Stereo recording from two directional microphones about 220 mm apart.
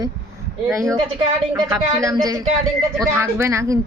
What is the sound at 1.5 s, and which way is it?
A woman's voice, 15° right (ahead or behind).